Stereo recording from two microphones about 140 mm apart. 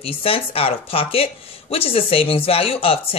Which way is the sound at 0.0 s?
40° left (ahead or behind).